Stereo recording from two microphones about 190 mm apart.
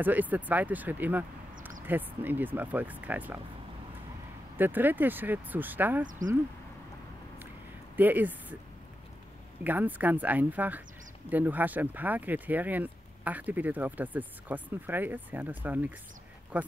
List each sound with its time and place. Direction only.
0.0 s speech: 10° right (ahead or behind)
4.6 s speech: 10° right (ahead or behind)
6.0 s speech: 45° right (ahead or behind)
7.9 s speech: 10° right (ahead or behind)
9.6 s speech: 10° right (ahead or behind)